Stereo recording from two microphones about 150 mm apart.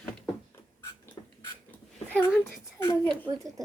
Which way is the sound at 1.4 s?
15° left (ahead or behind).